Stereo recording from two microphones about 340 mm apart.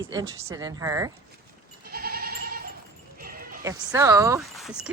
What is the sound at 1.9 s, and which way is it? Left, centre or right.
Goat, right.